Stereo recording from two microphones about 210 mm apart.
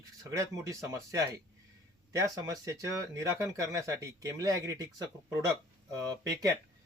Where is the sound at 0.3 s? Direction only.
15° right (ahead or behind).